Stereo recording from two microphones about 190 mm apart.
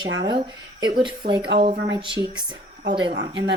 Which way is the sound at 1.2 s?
55° right (ahead or behind).